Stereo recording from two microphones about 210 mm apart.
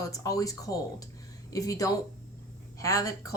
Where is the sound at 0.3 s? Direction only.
15° left (ahead or behind).